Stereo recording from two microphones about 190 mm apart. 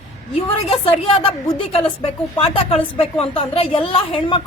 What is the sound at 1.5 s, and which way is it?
A man's voice, 30° left (ahead or behind).